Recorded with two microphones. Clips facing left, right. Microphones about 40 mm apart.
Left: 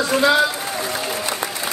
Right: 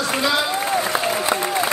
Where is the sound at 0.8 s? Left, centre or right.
Centre.